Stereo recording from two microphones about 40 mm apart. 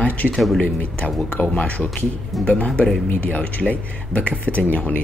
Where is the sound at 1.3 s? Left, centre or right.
Left.